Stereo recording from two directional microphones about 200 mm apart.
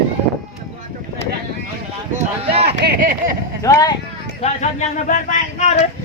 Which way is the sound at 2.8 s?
50° right (ahead or behind).